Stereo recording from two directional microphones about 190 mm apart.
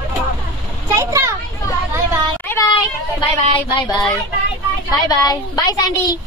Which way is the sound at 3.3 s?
25° left (ahead or behind).